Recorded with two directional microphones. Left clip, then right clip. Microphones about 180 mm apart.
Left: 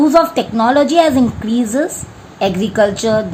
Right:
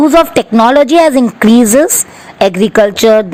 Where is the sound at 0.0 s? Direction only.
50° right (ahead or behind).